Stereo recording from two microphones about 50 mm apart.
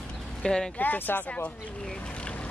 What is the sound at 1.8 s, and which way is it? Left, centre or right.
Vehicle, centre.